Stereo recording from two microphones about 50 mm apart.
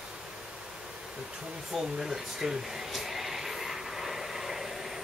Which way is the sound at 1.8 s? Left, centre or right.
Centre.